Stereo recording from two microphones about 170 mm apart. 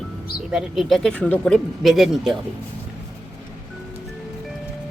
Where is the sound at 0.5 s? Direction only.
5° right (ahead or behind).